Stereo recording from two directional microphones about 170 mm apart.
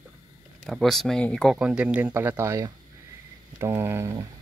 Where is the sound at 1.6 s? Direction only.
5° right (ahead or behind).